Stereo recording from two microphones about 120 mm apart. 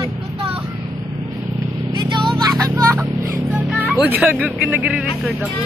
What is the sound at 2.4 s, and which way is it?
Music, 35° right (ahead or behind).